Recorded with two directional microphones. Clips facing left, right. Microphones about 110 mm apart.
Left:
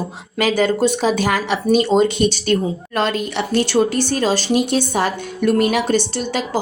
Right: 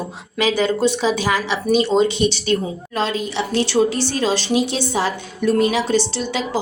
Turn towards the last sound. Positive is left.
turn(degrees=50)  # may be behind; listen again after turning